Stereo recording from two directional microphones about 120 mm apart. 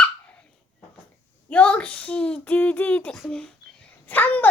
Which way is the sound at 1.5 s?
10° left (ahead or behind).